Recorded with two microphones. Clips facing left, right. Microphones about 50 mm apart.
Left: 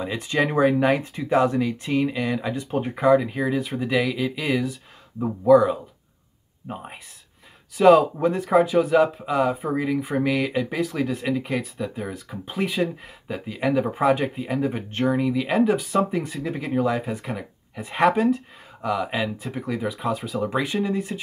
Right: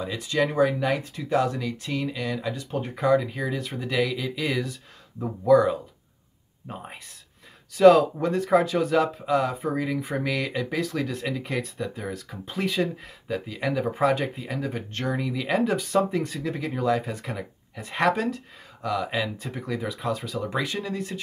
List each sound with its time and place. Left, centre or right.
0.0 s speech: left